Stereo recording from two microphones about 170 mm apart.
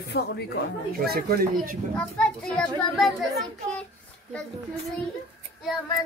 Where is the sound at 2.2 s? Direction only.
5° left (ahead or behind).